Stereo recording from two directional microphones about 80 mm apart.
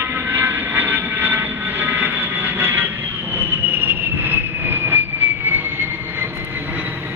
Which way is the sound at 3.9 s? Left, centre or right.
Right.